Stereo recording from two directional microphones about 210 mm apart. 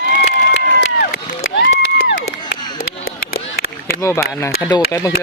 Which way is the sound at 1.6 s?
55° left (ahead or behind).